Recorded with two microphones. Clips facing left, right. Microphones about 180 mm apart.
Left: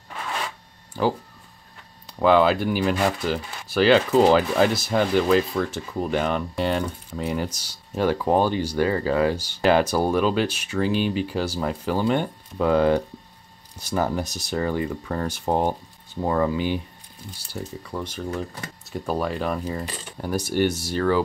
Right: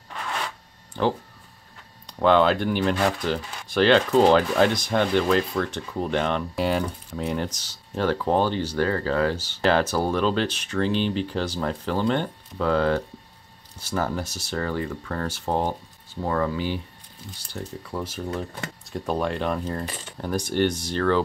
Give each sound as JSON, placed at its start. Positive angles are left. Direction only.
{"t": 1.0, "sound": "speech", "side_deg": 5}
{"t": 17.5, "sound": "speech", "side_deg": 5}